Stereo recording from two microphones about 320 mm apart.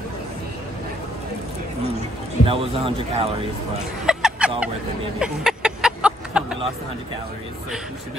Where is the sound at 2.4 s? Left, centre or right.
Centre.